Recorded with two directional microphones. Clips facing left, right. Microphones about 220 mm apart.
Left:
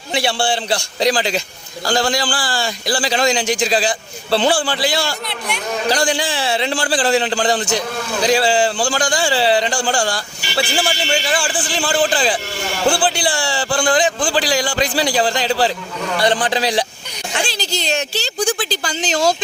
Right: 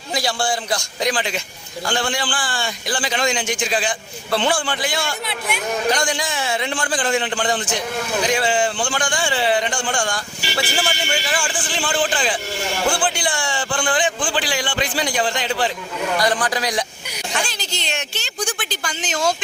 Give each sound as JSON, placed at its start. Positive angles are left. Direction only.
{"t": 0.1, "sound": "a man's voice", "side_deg": 30}